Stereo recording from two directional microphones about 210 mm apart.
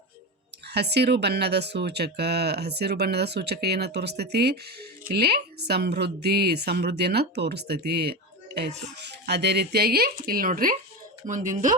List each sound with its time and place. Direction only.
0.7 s speech: 50° right (ahead or behind)